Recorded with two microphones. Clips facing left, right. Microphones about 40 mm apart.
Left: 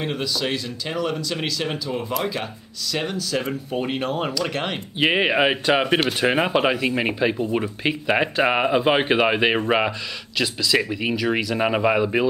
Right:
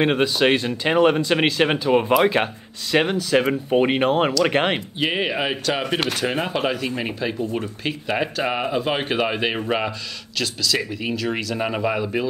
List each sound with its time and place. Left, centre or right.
0.0 s speech: right
4.9 s speech: centre